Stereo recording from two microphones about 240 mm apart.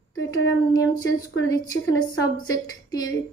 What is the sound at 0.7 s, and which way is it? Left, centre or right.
A woman's voice, centre.